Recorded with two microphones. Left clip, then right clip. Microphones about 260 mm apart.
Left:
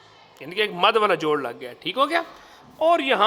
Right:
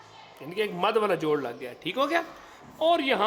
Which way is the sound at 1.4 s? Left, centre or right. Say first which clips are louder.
Left 4 dB; left.